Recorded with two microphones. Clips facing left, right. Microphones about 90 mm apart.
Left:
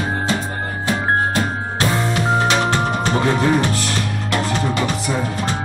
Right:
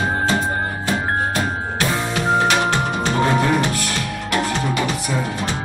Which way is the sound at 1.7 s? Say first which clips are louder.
Left 3 dB; 30° left (ahead or behind).